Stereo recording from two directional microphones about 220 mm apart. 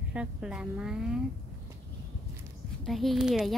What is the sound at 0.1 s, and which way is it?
A woman's voice, 5° right (ahead or behind).